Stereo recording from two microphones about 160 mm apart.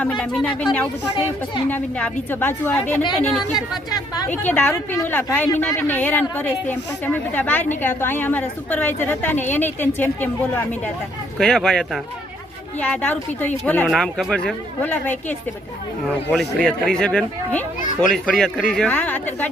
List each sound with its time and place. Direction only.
0.0 s a woman's voice: 5° left (ahead or behind)
3.9 s a woman's voice: 25° left (ahead or behind)
4.3 s a woman's voice: 10° left (ahead or behind)